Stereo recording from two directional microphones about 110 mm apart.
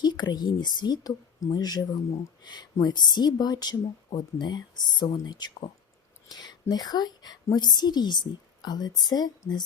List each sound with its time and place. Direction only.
0.0 s a woman's voice: 40° left (ahead or behind)